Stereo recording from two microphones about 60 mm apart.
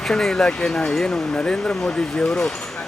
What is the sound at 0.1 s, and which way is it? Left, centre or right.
Speech, centre.